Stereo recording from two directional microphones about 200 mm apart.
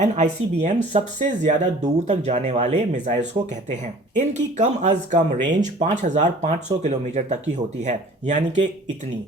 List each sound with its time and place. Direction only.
0.0 s speech: 35° right (ahead or behind)